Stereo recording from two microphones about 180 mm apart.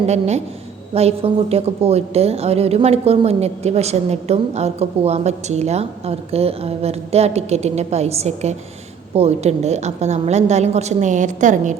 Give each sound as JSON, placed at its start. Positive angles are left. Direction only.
{"t": 0.1, "sound": "a woman's voice", "side_deg": -40}